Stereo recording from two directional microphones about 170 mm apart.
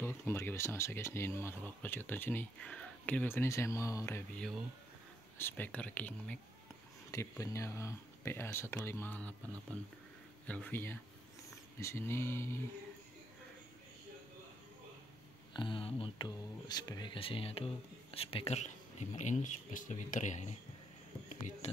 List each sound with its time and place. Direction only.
0.0 s speech: 15° left (ahead or behind)
4.4 s speech: centre (ahead or behind)
5.4 s speech: 10° left (ahead or behind)
10.4 s speech: 10° left (ahead or behind)
15.5 s speech: 30° left (ahead or behind); by 21.6 s 45° left (ahead or behind)